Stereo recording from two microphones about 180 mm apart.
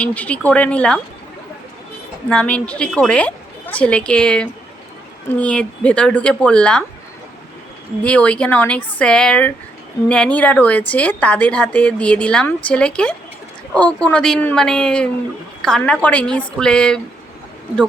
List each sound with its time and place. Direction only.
0.0 s speech: 5° left (ahead or behind)
2.3 s a woman's voice: 5° left (ahead or behind)
8.0 s a woman's voice: 5° left (ahead or behind)